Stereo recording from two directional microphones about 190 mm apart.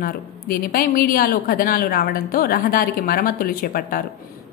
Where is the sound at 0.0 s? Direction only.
50° left (ahead or behind).